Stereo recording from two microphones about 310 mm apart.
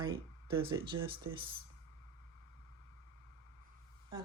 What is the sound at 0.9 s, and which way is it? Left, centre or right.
Speech, right.